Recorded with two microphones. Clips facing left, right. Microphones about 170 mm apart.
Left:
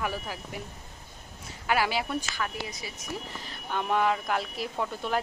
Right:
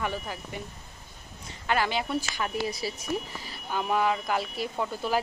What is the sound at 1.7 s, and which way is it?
Speech, 5° left (ahead or behind).